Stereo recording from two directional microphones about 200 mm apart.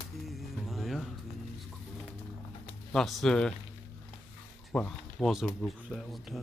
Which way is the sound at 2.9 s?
Centre (ahead or behind).